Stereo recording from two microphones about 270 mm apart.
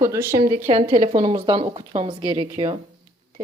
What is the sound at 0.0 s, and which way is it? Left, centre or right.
A woman's voice, centre.